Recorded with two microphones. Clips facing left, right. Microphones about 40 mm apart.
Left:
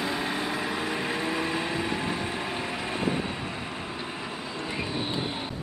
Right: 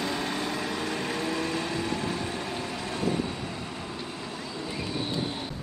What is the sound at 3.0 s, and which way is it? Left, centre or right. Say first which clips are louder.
Train: right 1 dB; left.